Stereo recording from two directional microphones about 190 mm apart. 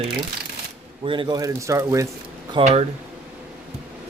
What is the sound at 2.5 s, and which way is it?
Speech, 35° right (ahead or behind).